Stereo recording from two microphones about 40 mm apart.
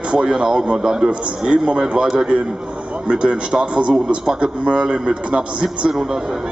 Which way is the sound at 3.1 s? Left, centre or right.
Right.